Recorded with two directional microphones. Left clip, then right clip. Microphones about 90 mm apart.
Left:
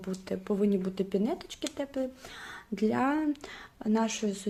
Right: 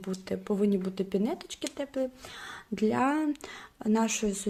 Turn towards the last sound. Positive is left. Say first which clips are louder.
# right 2 dB
turn(degrees=-25)  # may be behind; listen again after turning